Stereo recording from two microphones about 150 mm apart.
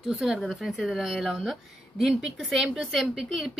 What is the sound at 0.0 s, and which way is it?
A woman's voice, 5° right (ahead or behind).